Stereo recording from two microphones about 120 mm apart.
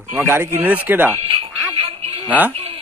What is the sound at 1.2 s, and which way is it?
Music, 55° right (ahead or behind).